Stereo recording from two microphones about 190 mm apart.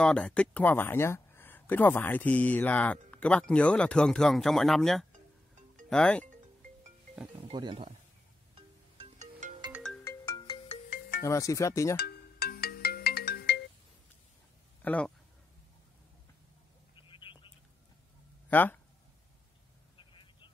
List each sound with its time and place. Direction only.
0.0 s speech: 5° left (ahead or behind)
7.3 s speech: 25° right (ahead or behind)
8.5 s music: 35° right (ahead or behind)
9.7 s ringtone: centre (ahead or behind)
10.0 s ringtone: 20° left (ahead or behind)
10.9 s music: 55° left (ahead or behind)
11.2 s speech: 15° left (ahead or behind)
12.0 s ringtone: 55° left (ahead or behind)
14.8 s speech: 5° left (ahead or behind)
16.9 s telephone: 25° left (ahead or behind)
18.5 s speech: 10° left (ahead or behind)
20.0 s vehicle: 25° left (ahead or behind)